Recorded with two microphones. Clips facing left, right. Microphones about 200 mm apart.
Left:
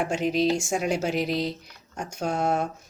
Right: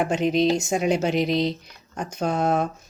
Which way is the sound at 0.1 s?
5° left (ahead or behind).